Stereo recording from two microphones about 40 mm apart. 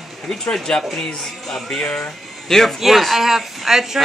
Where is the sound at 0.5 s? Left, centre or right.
Centre.